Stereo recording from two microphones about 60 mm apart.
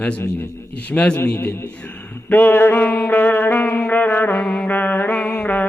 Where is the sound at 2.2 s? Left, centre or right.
Left.